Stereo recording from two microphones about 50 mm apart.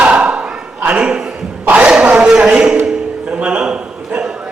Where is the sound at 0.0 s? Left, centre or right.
Right.